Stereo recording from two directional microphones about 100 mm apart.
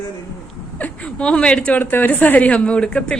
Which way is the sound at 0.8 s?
10° left (ahead or behind).